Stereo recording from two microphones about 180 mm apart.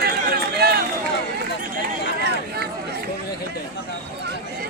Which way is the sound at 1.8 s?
65° right (ahead or behind).